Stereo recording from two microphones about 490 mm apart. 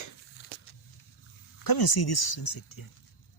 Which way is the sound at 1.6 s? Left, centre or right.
Left.